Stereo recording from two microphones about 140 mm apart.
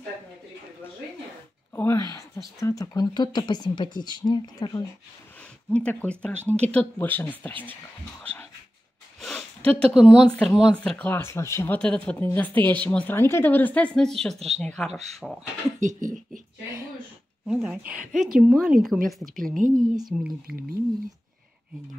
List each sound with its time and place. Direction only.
1.8 s speech: 20° left (ahead or behind)
5.7 s speech: 10° left (ahead or behind)
8.2 s dog: 10° left (ahead or behind)
9.2 s a sound: centre (ahead or behind)
9.7 s speech: 5° left (ahead or behind)
9.9 s a woman's voice: 5° right (ahead or behind)
15.8 s speech: 65° right (ahead or behind)
17.5 s a woman's voice: 5° right (ahead or behind)
19.3 s a woman's voice: 75° right (ahead or behind)
20.1 s a woman's voice: 10° right (ahead or behind)